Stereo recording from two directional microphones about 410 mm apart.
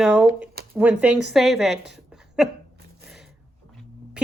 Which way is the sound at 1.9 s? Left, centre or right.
Centre.